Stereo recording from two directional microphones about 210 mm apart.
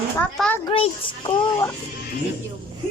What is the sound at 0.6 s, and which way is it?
Speech, 25° left (ahead or behind).